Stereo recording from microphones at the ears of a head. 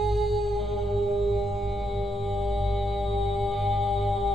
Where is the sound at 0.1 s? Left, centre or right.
Centre.